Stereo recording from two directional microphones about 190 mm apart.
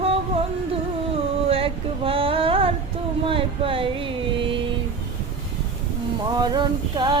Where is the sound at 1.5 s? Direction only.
30° right (ahead or behind).